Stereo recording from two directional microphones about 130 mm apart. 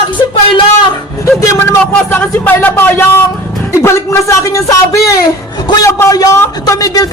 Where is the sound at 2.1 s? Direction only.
15° left (ahead or behind).